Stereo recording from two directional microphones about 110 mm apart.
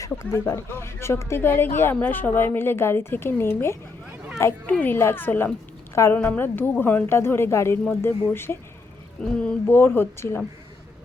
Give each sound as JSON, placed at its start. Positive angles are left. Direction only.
{"t": 0.1, "sound": "a woman's voice", "side_deg": 20}
{"t": 9.4, "sound": "speech", "side_deg": 10}
{"t": 9.7, "sound": "a woman's voice", "side_deg": 20}